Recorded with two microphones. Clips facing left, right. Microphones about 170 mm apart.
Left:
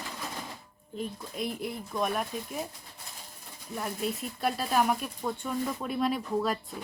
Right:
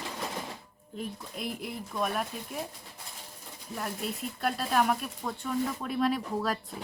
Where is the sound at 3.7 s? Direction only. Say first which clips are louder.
Left 2 dB; centre (ahead or behind).